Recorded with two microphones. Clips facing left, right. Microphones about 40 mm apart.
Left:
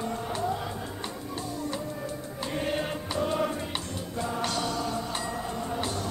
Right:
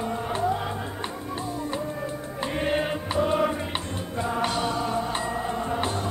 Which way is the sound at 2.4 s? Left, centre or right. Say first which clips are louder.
Right 5 dB; right.